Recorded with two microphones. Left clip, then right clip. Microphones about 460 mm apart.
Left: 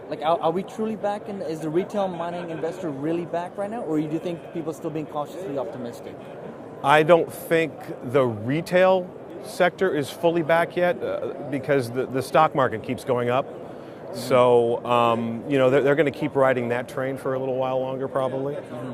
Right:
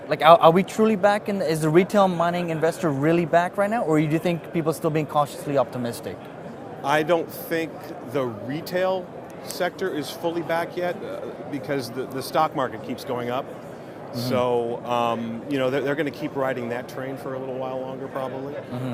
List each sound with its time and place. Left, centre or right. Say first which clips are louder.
0.1 s speech: right 9 dB; right
6.8 s speech: left 5 dB; left